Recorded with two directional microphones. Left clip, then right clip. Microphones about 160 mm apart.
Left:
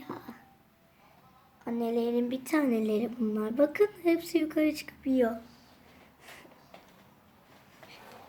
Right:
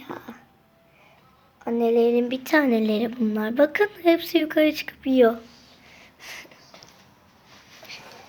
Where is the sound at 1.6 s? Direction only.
45° right (ahead or behind).